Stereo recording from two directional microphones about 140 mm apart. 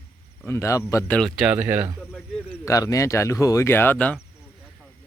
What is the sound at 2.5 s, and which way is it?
Speech, 25° left (ahead or behind).